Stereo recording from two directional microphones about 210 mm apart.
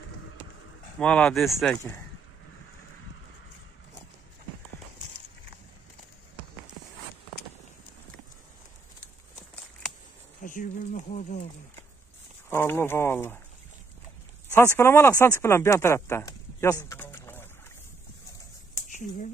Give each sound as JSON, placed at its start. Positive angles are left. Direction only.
{"t": 0.9, "sound": "speech", "side_deg": 5}
{"t": 10.4, "sound": "speech", "side_deg": 40}
{"t": 12.4, "sound": "speech", "side_deg": 10}
{"t": 14.5, "sound": "speech", "side_deg": 10}
{"t": 18.9, "sound": "a sound", "side_deg": 35}